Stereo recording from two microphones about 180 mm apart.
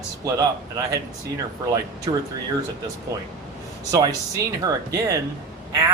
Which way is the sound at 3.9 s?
20° right (ahead or behind).